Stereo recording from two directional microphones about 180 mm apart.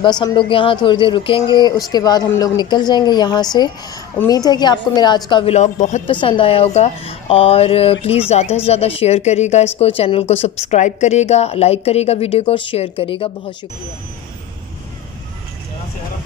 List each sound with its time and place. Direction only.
0.0 s a woman's voice: 25° left (ahead or behind)
5.5 s speech: 40° left (ahead or behind)
6.2 s speech: 30° left (ahead or behind)